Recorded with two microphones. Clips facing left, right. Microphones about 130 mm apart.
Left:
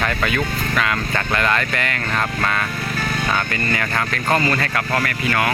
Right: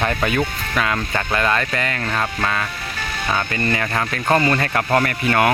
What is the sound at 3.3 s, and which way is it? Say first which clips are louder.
Speech: right 1 dB; 20° right (ahead or behind).